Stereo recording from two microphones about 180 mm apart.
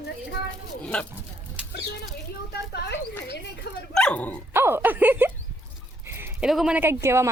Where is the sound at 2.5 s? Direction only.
65° left (ahead or behind).